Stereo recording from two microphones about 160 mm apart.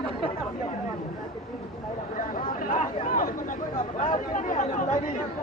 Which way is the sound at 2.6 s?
55° left (ahead or behind).